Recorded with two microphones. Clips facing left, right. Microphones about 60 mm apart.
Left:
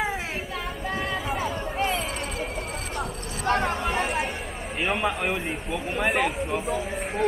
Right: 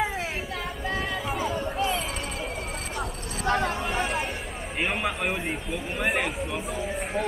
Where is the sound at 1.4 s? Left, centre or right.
Centre.